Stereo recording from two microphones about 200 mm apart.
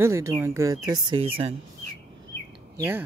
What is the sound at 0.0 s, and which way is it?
Speech, 15° right (ahead or behind).